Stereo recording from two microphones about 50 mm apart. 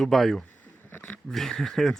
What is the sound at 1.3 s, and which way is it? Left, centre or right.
Speech, centre.